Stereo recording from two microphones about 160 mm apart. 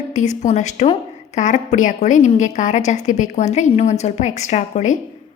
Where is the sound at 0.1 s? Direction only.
50° left (ahead or behind).